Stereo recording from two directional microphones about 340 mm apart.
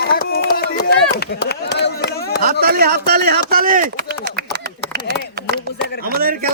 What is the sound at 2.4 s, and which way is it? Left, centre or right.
A man's voice, right.